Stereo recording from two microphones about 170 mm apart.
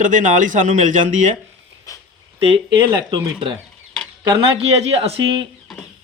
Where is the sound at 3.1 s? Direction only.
30° right (ahead or behind).